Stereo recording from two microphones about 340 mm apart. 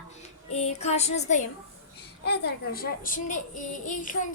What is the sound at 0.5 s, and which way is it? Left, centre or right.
A woman's voice, centre.